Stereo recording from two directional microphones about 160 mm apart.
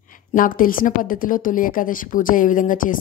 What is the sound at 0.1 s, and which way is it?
A woman's voice, 55° left (ahead or behind).